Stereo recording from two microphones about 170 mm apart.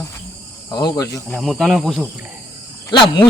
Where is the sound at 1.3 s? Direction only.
Centre (ahead or behind).